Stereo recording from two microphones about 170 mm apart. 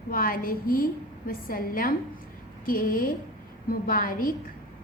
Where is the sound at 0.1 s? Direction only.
55° left (ahead or behind).